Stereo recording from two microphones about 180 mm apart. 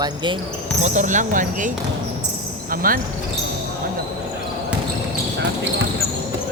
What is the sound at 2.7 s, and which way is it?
Speech, 55° right (ahead or behind).